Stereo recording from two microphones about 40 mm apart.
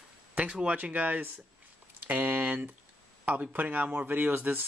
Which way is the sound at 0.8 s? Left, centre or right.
Right.